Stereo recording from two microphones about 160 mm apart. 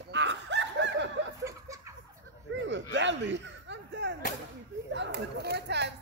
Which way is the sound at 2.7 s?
90° right.